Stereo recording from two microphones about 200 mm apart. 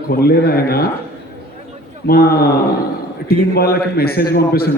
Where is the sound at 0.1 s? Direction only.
50° left (ahead or behind).